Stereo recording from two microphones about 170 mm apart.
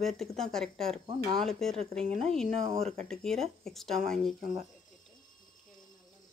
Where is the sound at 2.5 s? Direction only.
45° right (ahead or behind).